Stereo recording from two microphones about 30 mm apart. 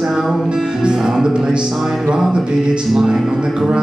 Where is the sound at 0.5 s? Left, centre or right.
Right.